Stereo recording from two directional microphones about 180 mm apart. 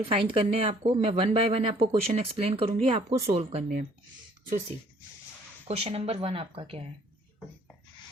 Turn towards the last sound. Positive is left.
turn(degrees=-35)  # may be behind; listen again after turning